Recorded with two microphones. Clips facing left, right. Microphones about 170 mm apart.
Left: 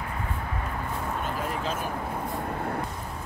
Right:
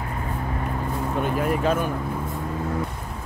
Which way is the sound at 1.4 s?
60° right (ahead or behind).